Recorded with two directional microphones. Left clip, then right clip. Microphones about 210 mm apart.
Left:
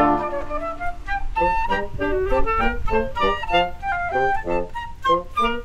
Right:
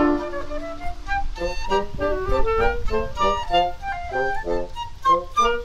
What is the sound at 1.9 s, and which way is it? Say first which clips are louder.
Music: left 2 dB; 20° right (ahead or behind).